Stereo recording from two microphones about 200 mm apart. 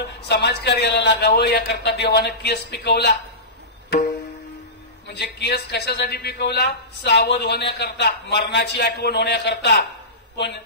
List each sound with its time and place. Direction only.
0.3 s a woman's voice: 55° left (ahead or behind)
5.0 s a woman's voice: 55° left (ahead or behind)